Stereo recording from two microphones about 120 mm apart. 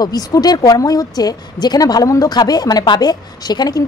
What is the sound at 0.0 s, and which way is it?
Speech, 30° left (ahead or behind).